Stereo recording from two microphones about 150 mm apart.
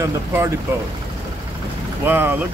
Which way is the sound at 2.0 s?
15° right (ahead or behind).